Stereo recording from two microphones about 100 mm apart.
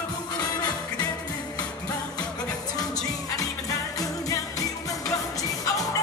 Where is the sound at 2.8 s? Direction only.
5° left (ahead or behind).